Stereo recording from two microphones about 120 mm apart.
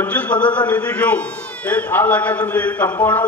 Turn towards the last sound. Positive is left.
turn(degrees=15)  # may be behind; listen again after turning